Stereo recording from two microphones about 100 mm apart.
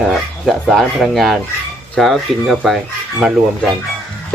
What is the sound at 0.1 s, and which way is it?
Speech, centre (ahead or behind).